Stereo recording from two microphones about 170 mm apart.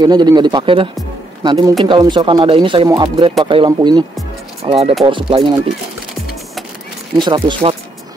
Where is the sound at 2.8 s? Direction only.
20° right (ahead or behind).